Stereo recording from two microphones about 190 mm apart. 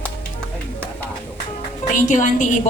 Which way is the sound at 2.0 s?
40° left (ahead or behind).